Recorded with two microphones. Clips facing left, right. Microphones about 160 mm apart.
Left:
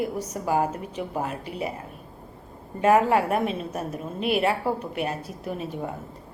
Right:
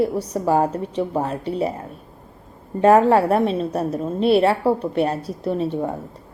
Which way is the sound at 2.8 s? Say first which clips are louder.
Right 6 dB; 35° right (ahead or behind).